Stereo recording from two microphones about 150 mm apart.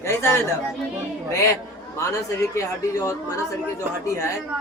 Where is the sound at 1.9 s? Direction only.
20° left (ahead or behind).